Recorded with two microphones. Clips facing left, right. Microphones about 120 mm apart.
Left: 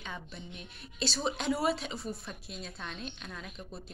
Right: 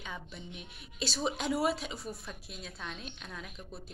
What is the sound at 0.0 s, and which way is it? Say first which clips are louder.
A woman's voice: even; 5° right (ahead or behind).